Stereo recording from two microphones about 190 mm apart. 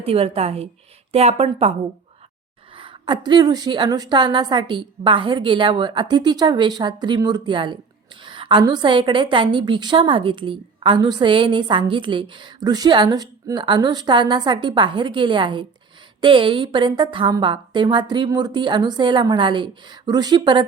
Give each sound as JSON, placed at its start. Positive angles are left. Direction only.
{"t": 0.0, "sound": "a woman's voice", "side_deg": -30}
{"t": 2.7, "sound": "a woman's voice", "side_deg": -25}